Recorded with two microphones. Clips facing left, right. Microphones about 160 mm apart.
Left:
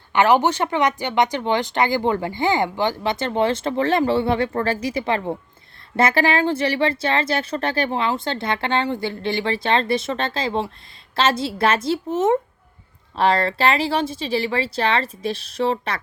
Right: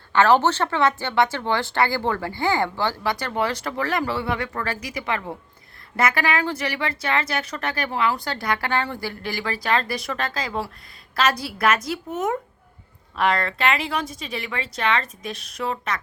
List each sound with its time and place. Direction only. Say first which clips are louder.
0.1 s speech: left 1 dB; 15° left (ahead or behind); by 16.0 s 30° left (ahead or behind)